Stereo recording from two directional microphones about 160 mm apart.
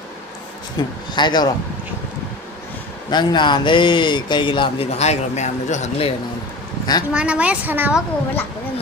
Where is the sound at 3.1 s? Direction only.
30° left (ahead or behind); by 6.1 s 45° left (ahead or behind).